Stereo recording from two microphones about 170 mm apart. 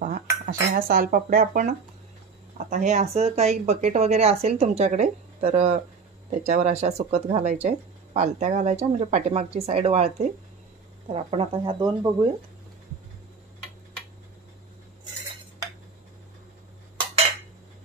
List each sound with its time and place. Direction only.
0.5 s speech: 60° right (ahead or behind); by 12.3 s 25° right (ahead or behind)